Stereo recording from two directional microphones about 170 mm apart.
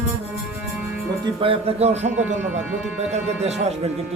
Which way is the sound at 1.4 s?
35° right (ahead or behind).